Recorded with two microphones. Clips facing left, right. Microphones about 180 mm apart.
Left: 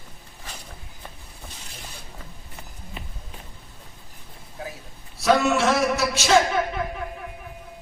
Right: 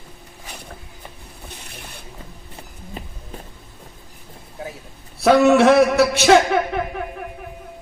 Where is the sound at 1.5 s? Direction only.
60° right (ahead or behind).